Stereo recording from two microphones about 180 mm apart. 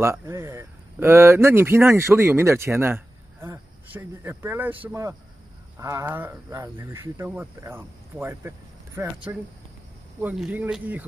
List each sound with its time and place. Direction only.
0.0 s speech: 15° right (ahead or behind)